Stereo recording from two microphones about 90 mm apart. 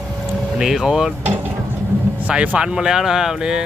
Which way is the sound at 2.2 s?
15° right (ahead or behind).